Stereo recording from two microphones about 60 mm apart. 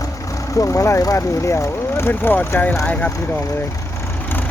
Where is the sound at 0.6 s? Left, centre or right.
Left.